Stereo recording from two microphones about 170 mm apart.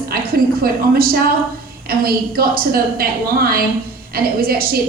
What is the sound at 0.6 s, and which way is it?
A woman's voice, 60° right (ahead or behind).